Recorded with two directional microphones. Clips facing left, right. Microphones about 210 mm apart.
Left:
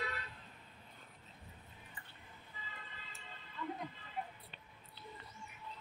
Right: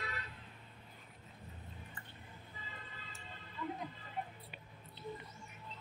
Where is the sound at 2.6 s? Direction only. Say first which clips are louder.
Left 1 dB; 45° right (ahead or behind).